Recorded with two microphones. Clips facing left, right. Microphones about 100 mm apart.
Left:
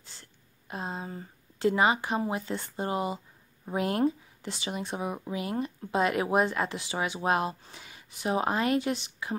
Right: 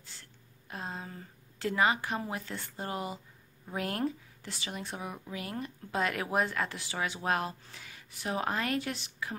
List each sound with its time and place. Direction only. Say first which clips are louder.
0.0 s speech: left 1 dB; 20° left (ahead or behind)